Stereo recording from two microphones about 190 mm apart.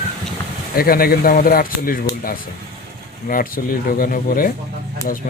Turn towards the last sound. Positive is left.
turn(degrees=50)  # may be behind; listen again after turning